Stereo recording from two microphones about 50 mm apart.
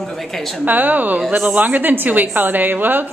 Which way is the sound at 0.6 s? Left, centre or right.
Right.